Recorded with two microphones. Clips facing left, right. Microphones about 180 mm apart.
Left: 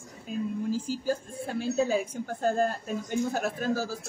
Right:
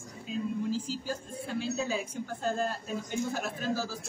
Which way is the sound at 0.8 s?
45° left (ahead or behind).